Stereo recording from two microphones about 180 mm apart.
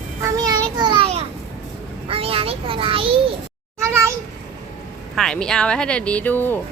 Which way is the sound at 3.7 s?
15° right (ahead or behind).